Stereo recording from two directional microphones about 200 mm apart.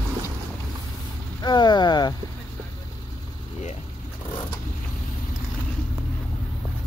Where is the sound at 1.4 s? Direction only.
20° left (ahead or behind).